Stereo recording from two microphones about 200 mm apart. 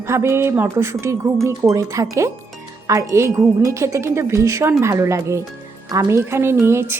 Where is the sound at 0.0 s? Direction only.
15° right (ahead or behind).